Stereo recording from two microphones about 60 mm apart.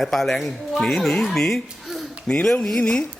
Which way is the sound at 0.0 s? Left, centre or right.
Centre.